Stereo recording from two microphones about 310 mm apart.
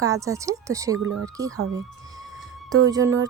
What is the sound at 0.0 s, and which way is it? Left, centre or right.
Speech, centre.